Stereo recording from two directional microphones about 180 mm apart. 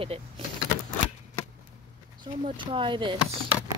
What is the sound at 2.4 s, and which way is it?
Speech, 30° right (ahead or behind).